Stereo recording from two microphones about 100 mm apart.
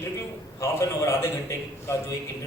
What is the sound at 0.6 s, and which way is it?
A man's voice, 30° left (ahead or behind).